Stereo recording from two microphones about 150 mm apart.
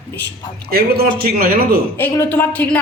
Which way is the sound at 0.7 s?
90° right.